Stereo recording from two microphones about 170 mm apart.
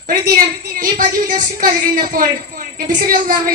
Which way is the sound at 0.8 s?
50° right (ahead or behind).